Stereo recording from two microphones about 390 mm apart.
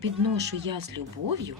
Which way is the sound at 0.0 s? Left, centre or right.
Right.